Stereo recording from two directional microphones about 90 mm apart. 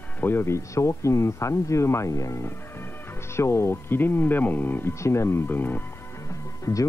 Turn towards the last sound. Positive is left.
turn(degrees=35)  # may be behind; listen again after turning